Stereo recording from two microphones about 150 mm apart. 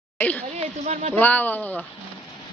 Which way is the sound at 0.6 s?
45° right (ahead or behind).